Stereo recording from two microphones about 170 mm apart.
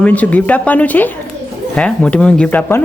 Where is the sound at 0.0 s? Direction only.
10° left (ahead or behind).